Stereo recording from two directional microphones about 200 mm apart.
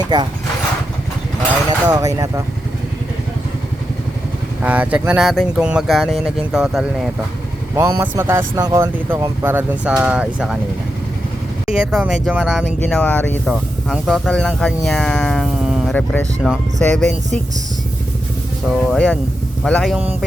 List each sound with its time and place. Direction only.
0.1 s speech: 20° right (ahead or behind)
1.9 s speech: 15° right (ahead or behind)
4.6 s speech: 5° right (ahead or behind)
7.8 s speech: 15° right (ahead or behind)
11.7 s speech: 5° right (ahead or behind)
18.7 s speech: centre (ahead or behind)